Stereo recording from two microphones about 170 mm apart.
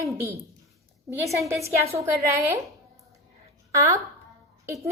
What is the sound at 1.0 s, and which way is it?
A woman's voice, 20° right (ahead or behind).